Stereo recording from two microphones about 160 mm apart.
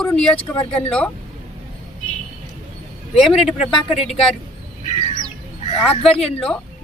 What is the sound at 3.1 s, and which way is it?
A woman's voice, 40° left (ahead or behind).